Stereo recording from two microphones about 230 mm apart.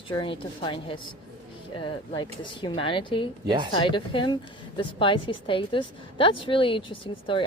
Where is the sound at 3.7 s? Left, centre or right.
Left.